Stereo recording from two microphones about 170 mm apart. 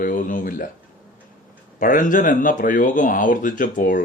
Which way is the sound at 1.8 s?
50° left (ahead or behind).